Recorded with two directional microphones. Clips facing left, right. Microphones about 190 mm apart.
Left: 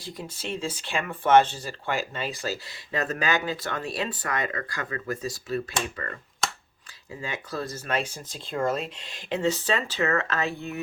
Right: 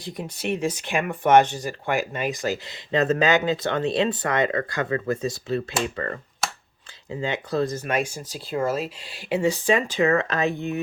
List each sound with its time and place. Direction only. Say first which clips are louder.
0.0 s speech: right 6 dB; 20° right (ahead or behind)
7.1 s speech: right 8 dB; 25° right (ahead or behind)